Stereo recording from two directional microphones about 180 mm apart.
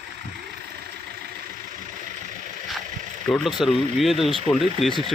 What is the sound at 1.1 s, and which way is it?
Vehicle, 60° right (ahead or behind).